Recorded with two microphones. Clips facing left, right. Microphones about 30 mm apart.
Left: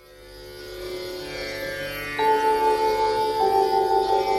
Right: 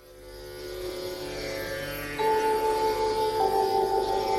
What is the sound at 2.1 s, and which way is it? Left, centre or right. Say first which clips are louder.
Music: left 5 dB; left.